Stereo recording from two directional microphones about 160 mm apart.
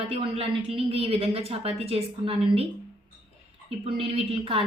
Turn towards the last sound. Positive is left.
turn(degrees=-35)  # may be behind; listen again after turning